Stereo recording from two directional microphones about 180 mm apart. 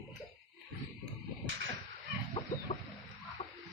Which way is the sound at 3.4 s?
40° left (ahead or behind).